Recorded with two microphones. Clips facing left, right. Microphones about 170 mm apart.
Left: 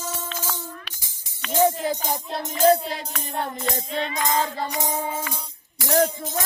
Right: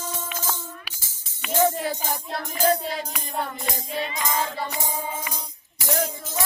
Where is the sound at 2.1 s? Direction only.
20° left (ahead or behind).